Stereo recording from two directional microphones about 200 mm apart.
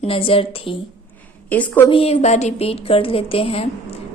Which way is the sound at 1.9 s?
30° left (ahead or behind).